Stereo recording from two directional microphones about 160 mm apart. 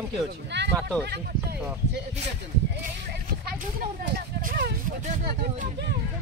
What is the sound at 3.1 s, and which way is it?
Speech, 70° right (ahead or behind).